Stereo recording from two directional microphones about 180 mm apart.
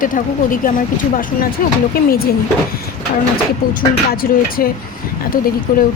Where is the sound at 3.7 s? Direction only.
55° left (ahead or behind).